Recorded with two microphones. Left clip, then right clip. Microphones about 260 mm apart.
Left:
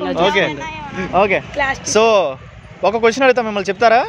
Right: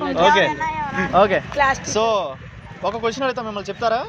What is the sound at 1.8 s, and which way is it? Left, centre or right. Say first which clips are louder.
A man's voice: left 7 dB; left.